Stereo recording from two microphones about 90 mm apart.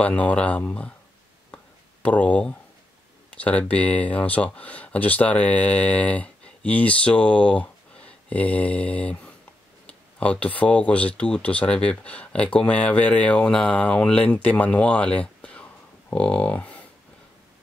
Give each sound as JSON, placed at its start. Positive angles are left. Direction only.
{"t": 0.0, "sound": "speech", "side_deg": 15}
{"t": 2.0, "sound": "speech", "side_deg": 15}